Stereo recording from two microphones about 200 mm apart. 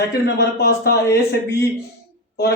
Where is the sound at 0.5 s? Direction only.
50° left (ahead or behind).